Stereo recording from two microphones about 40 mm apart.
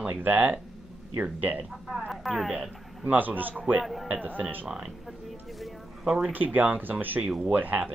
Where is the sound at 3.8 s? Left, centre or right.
Centre.